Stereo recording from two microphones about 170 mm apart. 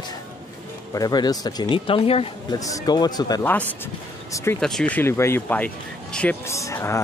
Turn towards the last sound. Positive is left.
turn(degrees=15)  # may be behind; listen again after turning